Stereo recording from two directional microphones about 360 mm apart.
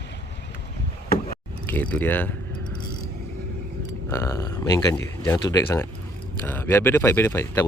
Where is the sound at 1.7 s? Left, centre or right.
Centre.